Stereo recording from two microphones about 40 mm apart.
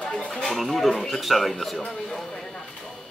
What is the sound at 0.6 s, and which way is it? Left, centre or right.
Speech, centre.